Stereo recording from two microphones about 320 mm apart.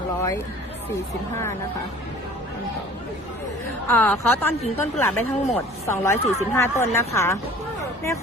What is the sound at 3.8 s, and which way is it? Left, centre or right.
Speech, centre.